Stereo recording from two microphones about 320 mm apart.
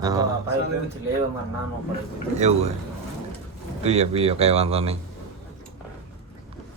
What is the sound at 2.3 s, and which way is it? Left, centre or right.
Speech, right.